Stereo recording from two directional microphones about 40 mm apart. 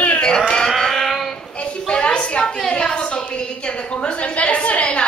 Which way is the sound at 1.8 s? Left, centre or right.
Left.